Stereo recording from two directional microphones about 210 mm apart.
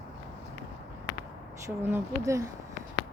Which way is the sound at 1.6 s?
10° right (ahead or behind).